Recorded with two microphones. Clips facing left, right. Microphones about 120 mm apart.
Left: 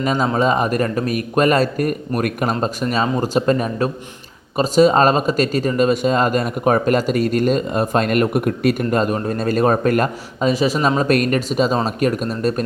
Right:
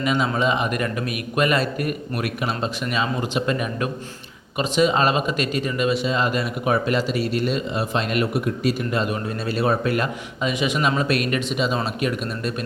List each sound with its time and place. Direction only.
0.0 s speech: 40° left (ahead or behind)